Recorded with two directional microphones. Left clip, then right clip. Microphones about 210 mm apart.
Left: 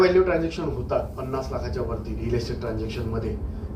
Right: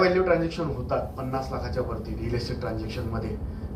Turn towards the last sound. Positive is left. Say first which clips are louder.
# left 3 dB
turn(degrees=-30)  # may be behind; listen again after turning